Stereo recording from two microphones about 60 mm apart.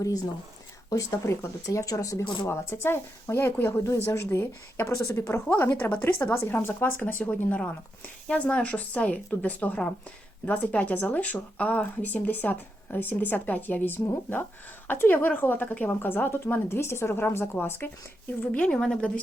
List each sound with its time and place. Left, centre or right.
0.9 s speech: left
1.6 s speech: left
2.5 s a woman's voice: left
3.8 s a woman's voice: left
4.9 s a woman's voice: left
5.8 s speech: left
6.3 s a woman's voice: left
18.7 s a woman's voice: centre